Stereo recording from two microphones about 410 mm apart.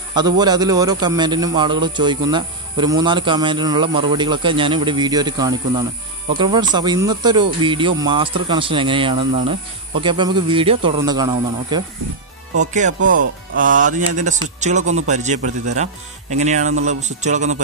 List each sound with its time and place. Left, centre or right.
0.1 s a man's voice: centre